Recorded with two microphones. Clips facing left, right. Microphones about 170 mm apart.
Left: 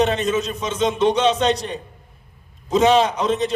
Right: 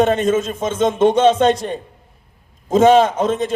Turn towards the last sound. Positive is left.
turn(degrees=-50)  # may be behind; listen again after turning